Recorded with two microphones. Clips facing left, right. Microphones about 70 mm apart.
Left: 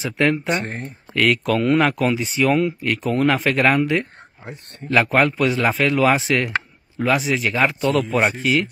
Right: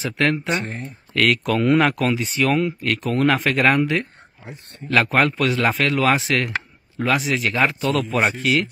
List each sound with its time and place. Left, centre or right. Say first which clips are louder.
0.0 s speech: left 1 dB; centre
0.6 s speech: left 1 dB; left
1.1 s speech: left 1 dB; centre